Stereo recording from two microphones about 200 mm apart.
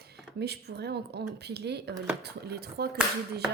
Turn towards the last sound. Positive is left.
turn(degrees=-50)  # may be behind; listen again after turning